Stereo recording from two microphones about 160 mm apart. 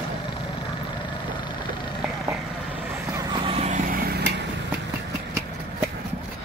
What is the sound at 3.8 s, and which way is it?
Vehicle, 70° right (ahead or behind).